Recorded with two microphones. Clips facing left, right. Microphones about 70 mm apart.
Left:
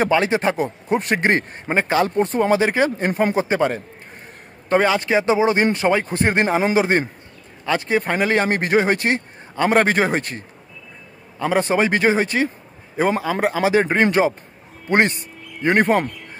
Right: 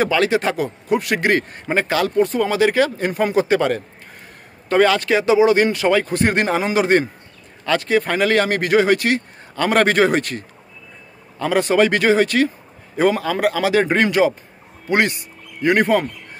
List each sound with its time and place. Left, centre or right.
0.0 s a man's voice: left